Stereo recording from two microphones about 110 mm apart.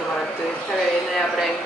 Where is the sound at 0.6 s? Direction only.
Centre (ahead or behind).